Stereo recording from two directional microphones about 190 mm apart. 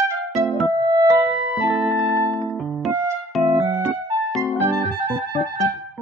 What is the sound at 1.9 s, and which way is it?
Music, 15° right (ahead or behind).